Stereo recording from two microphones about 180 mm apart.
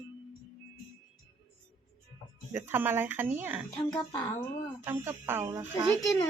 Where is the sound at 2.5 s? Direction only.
10° right (ahead or behind).